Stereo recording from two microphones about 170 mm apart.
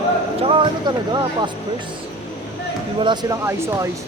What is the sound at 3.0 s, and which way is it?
Speech, 25° right (ahead or behind).